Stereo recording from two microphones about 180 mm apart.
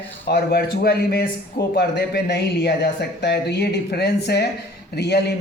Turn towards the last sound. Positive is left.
turn(degrees=65)  # may be behind; listen again after turning